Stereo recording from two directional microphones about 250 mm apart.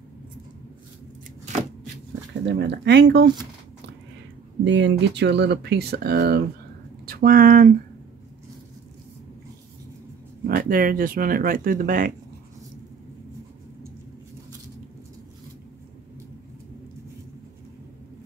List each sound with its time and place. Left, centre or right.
2.4 s speech: right
4.6 s speech: right
10.4 s speech: right